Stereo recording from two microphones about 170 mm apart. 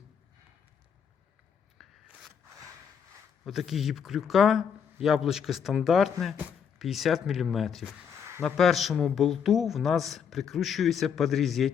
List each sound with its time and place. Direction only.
1.8 s scissors: centre (ahead or behind)
3.4 s speech: centre (ahead or behind)
8.1 s a sound: 15° right (ahead or behind)
8.4 s speech: 5° left (ahead or behind)